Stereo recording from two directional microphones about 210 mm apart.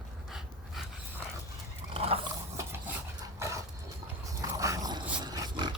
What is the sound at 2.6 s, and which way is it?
Dog, 15° right (ahead or behind).